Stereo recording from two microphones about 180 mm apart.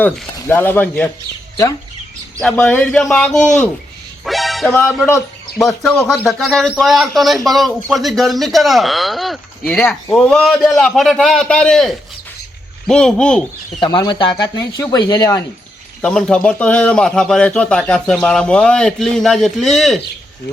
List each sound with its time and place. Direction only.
0.3 s speech: 10° left (ahead or behind)
2.4 s speech: 10° left (ahead or behind)
4.3 s music: centre (ahead or behind)
4.8 s speech: 10° left (ahead or behind)
13.7 s speech: 25° left (ahead or behind)
16.0 s speech: 5° left (ahead or behind)